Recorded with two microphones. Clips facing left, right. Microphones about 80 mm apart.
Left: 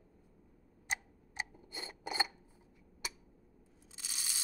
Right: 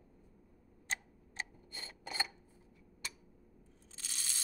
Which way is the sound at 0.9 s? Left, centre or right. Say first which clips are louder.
Left 2 dB; centre.